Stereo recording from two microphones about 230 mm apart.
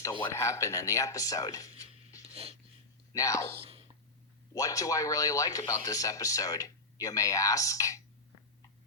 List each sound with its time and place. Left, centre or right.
0.0 s speech: centre
2.2 s wheeze: right
3.1 s speech: centre
3.6 s whispering: right
4.5 s speech: centre